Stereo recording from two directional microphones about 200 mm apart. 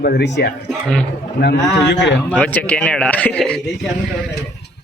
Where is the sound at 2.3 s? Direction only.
5° left (ahead or behind).